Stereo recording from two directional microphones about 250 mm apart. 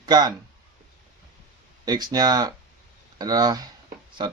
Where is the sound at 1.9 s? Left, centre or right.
Centre.